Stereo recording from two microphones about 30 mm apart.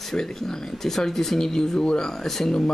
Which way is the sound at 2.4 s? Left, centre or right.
Left.